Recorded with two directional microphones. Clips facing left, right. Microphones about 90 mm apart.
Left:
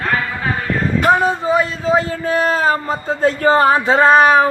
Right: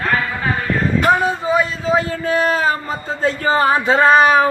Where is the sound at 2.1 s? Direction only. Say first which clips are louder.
Even; 35° left (ahead or behind).